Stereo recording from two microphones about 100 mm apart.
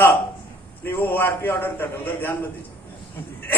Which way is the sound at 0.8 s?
20° left (ahead or behind).